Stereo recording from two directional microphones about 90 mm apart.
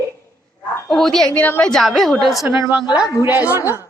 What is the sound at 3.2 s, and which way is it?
Speech, 20° right (ahead or behind).